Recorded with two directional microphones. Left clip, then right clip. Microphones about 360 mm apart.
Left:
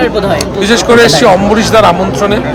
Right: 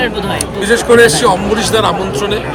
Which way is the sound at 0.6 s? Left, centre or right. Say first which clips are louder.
Left 1 dB; centre.